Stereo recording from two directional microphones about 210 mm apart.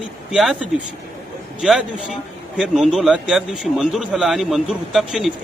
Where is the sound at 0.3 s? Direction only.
5° right (ahead or behind).